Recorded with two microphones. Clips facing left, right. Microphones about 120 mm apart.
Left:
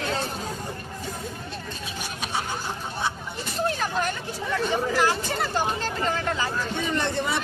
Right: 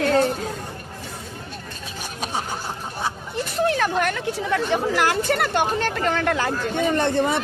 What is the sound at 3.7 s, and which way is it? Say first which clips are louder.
Speech: right 5 dB; 70° right (ahead or behind).